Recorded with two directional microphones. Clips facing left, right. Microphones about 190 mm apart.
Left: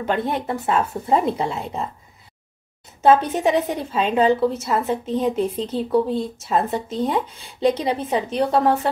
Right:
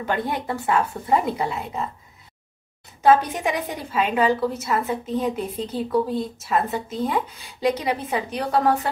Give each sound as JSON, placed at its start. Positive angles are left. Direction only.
{"t": 0.0, "sound": "a woman's voice", "side_deg": 25}
{"t": 3.0, "sound": "a woman's voice", "side_deg": 25}